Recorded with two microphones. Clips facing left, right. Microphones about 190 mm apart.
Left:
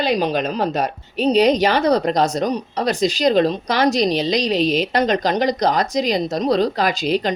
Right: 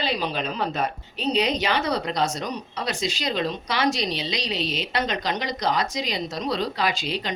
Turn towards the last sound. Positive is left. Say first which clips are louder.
# left 8 dB
turn(degrees=45)  # may be behind; listen again after turning